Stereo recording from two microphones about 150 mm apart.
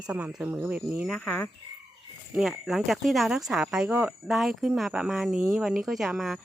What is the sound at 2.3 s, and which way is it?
Speech, centre (ahead or behind).